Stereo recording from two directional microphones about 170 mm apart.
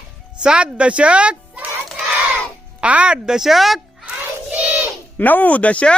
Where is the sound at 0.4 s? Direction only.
5° right (ahead or behind).